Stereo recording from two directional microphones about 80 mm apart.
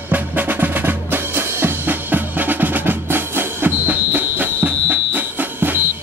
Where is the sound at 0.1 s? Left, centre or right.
Right.